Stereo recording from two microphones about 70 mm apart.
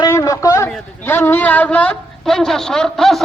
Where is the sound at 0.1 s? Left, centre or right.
Left.